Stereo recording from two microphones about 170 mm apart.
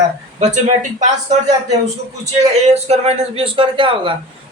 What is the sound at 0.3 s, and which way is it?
Speech, 45° right (ahead or behind).